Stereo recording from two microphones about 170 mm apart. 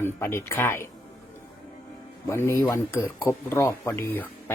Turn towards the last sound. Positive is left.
turn(degrees=10)  # may be behind; listen again after turning